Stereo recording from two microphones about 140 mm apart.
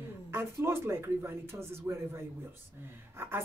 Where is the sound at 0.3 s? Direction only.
20° right (ahead or behind).